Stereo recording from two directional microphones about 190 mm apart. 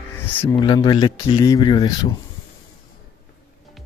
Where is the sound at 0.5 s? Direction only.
20° left (ahead or behind).